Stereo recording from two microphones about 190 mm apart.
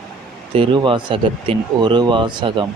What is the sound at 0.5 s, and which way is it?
Speech, 25° right (ahead or behind).